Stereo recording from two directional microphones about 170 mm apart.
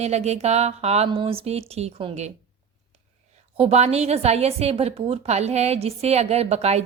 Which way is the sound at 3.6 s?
40° right (ahead or behind).